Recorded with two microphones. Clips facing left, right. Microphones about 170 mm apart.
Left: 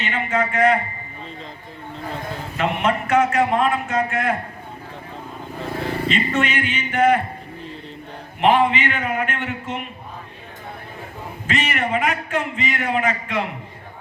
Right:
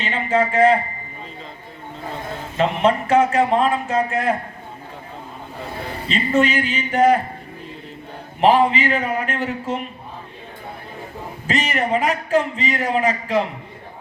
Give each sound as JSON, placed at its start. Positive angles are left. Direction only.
{"t": 0.0, "sound": "speech", "side_deg": -30}
{"t": 2.6, "sound": "a man's voice", "side_deg": -30}
{"t": 6.1, "sound": "a man's voice", "side_deg": -35}
{"t": 8.4, "sound": "a man's voice", "side_deg": -35}
{"t": 11.4, "sound": "a man's voice", "side_deg": -35}